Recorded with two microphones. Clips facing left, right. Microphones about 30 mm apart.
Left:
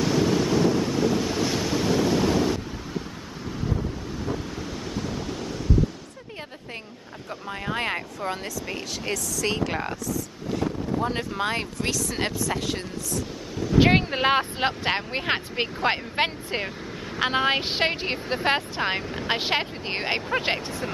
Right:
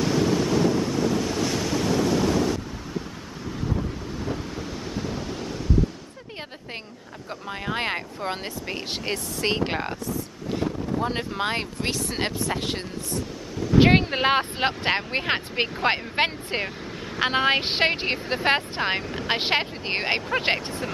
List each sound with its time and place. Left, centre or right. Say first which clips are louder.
0.0 s waves: even; centre
4.6 s waves: even; centre
7.7 s a sound: even; right
9.1 s speech: right 1 dB; right
10.5 s boat: even; right
11.3 s speech: even; centre
11.9 s speech: even; right
13.7 s a woman's voice: right 2 dB; centre